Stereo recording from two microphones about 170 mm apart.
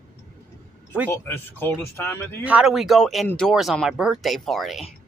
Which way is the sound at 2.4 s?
5° right (ahead or behind).